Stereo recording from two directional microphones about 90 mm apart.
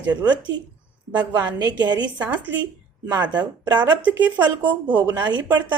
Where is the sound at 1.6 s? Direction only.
50° right (ahead or behind).